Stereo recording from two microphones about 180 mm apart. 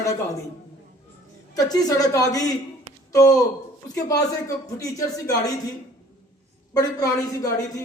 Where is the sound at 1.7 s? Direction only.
20° left (ahead or behind).